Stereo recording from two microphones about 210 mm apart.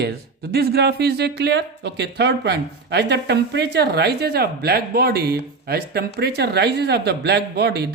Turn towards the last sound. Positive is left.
turn(degrees=-50)  # may be behind; listen again after turning